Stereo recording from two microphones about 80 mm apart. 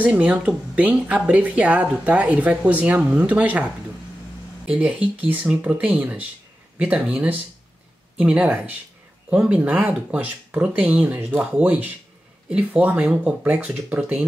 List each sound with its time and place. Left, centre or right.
0.0 s speech: centre